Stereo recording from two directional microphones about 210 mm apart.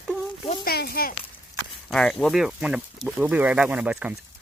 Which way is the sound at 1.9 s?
Centre (ahead or behind).